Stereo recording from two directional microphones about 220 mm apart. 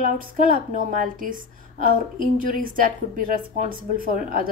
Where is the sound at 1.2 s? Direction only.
40° right (ahead or behind).